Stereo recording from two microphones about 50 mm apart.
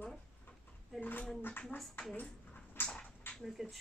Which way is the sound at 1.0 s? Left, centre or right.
Left.